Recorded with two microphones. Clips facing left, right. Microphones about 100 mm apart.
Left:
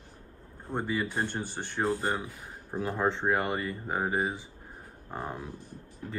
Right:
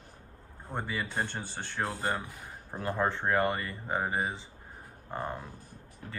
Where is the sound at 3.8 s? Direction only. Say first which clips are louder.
Left 1 dB; 5° left (ahead or behind).